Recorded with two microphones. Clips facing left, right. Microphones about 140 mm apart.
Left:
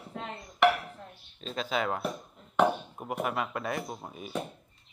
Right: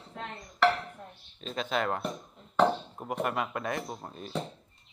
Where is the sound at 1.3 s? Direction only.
Centre (ahead or behind).